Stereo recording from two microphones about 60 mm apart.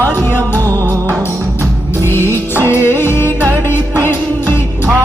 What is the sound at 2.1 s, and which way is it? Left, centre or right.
Music, left.